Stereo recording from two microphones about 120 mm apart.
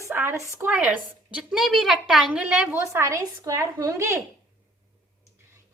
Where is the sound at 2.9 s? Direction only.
25° right (ahead or behind).